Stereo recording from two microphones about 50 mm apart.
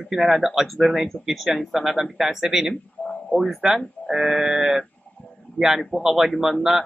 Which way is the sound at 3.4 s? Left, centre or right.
Centre.